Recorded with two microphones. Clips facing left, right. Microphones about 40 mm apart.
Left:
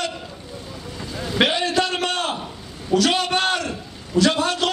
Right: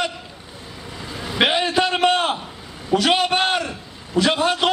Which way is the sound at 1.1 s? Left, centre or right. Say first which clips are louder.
Right 1 dB; centre.